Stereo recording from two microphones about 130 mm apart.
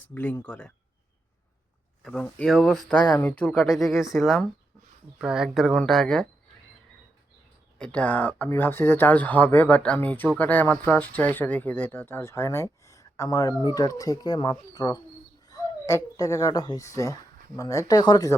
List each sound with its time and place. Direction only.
0.1 s speech: 15° left (ahead or behind)
2.0 s speech: 5° left (ahead or behind)
7.8 s speech: 10° left (ahead or behind); by 18.3 s 30° left (ahead or behind)